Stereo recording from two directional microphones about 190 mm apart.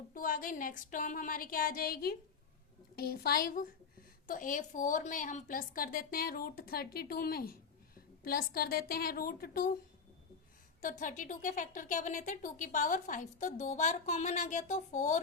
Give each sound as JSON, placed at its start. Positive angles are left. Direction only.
{"t": 0.1, "sound": "a woman's voice", "side_deg": 45}
{"t": 10.8, "sound": "speech", "side_deg": 40}